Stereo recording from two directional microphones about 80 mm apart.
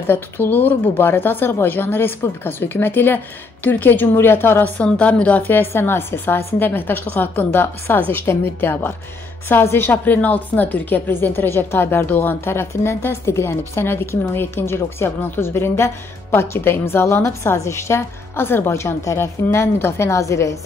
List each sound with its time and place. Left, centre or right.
0.0 s a woman's voice: left